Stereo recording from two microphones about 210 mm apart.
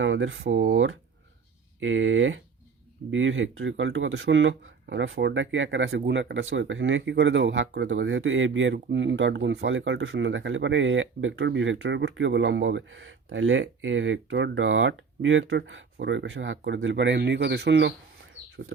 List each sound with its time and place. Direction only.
0.0 s speech: 65° right (ahead or behind)